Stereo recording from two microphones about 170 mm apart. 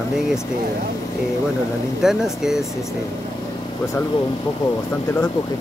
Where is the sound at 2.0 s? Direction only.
5° right (ahead or behind).